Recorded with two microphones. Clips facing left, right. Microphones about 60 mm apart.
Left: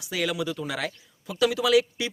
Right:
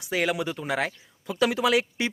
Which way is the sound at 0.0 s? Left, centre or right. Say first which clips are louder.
Right 2 dB; right.